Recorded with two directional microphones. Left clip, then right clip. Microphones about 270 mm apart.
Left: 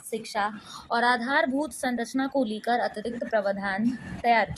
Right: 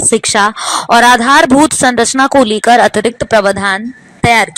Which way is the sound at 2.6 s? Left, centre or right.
Right.